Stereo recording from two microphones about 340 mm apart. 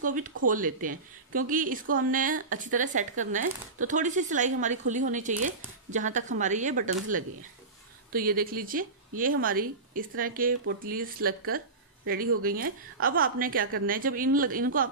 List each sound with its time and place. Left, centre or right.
0.0 s a woman's voice: right
12.4 s a woman's voice: right